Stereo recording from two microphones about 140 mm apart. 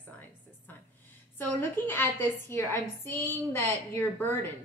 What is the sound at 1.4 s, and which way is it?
A woman's voice, 15° left (ahead or behind).